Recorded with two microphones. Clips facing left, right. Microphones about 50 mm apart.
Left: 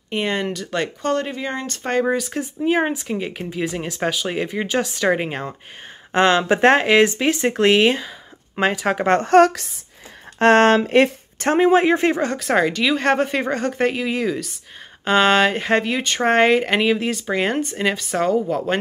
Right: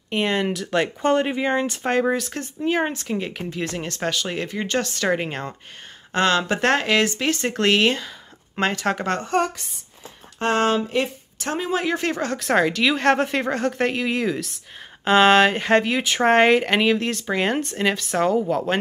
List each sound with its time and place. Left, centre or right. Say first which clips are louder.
0.1 s speech: even; centre
1.0 s speech: right 4 dB; centre
6.1 s speech: left 4 dB; left
9.2 s speech: left 9 dB; left
10.4 s speech: left 7 dB; left
12.2 s speech: left 2 dB; centre